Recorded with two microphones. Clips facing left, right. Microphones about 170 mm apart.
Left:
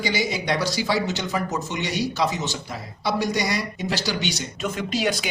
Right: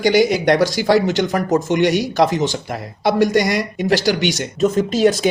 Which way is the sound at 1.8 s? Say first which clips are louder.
Right 10 dB; 90° right.